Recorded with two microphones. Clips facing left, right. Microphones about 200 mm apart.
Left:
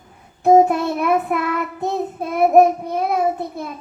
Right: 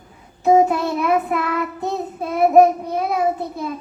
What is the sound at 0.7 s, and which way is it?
Child singing, 55° left (ahead or behind).